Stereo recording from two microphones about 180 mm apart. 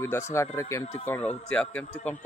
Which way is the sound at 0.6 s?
15° left (ahead or behind).